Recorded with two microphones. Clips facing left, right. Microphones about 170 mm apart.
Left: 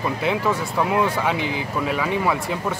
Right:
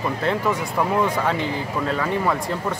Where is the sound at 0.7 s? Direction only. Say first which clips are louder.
Even; 5° left (ahead or behind).